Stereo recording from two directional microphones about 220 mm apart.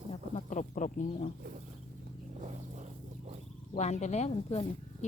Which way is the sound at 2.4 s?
30° right (ahead or behind).